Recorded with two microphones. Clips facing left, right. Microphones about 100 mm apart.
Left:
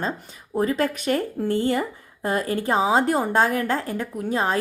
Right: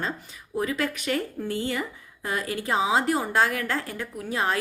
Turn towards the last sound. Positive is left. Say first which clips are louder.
# left 4 dB
turn(degrees=35)  # may be behind; listen again after turning